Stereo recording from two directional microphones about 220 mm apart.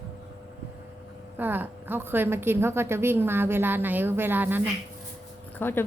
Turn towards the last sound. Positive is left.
turn(degrees=10)  # may be behind; listen again after turning